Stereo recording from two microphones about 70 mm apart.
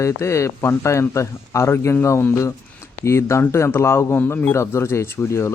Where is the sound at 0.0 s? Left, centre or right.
Left.